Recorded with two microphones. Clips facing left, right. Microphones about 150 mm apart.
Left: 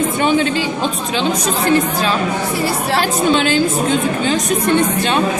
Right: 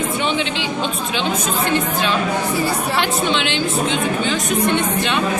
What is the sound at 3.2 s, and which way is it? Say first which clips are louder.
Speech: left 6 dB; 40° left (ahead or behind).